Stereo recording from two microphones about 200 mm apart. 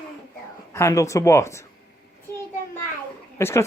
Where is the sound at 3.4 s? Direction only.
10° left (ahead or behind).